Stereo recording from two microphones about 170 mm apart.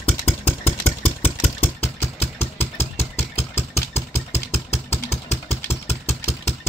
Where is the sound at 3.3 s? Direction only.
40° left (ahead or behind).